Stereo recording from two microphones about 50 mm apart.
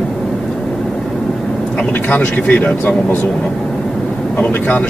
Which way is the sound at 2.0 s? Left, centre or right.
Left.